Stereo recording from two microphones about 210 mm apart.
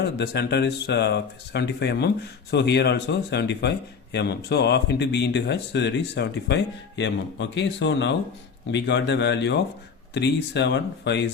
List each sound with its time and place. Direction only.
0.0 s speech: 50° left (ahead or behind)